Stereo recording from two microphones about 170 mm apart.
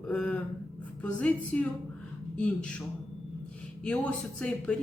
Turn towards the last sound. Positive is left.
turn(degrees=5)  # may be behind; listen again after turning